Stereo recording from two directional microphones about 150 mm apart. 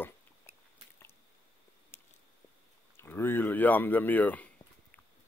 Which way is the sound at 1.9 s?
15° left (ahead or behind).